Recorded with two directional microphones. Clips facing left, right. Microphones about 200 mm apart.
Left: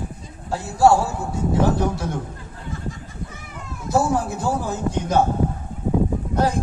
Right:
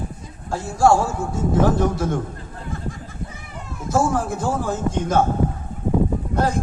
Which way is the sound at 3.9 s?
50° right (ahead or behind).